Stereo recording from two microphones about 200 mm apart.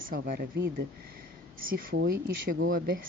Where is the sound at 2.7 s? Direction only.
45° right (ahead or behind).